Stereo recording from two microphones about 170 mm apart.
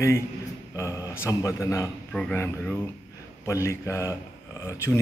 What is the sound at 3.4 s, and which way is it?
A man's voice, 15° left (ahead or behind).